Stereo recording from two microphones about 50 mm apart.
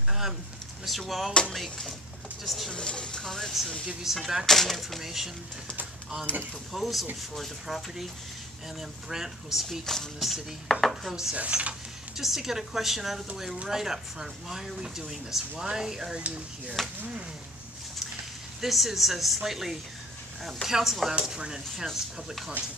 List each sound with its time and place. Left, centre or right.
0.8 s speech: centre
2.7 s speech: centre
3.8 s speech: centre
4.5 s speech: centre
6.3 s speech: left
6.7 s speech: centre
9.1 s speech: centre
11.3 s speech: right
12.2 s speech: centre
16.2 s speech: right
18.6 s speech: centre
21.1 s speech: centre
21.7 s speech: centre